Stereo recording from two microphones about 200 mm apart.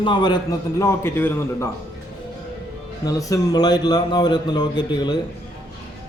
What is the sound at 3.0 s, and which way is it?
A man's voice, 15° left (ahead or behind).